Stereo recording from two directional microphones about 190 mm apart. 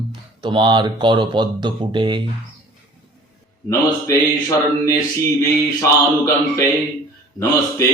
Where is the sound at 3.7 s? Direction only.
15° left (ahead or behind).